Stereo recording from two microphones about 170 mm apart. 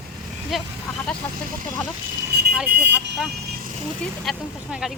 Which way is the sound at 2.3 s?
75° right (ahead or behind).